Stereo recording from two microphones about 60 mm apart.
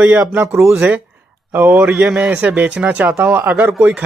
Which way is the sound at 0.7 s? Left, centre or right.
Right.